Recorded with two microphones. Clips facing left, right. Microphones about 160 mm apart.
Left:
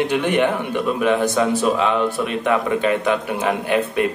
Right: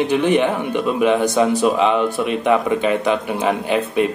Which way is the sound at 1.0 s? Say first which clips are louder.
Right 3 dB; 15° right (ahead or behind).